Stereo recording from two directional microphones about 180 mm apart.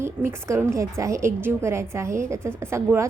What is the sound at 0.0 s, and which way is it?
A woman's voice, 15° right (ahead or behind).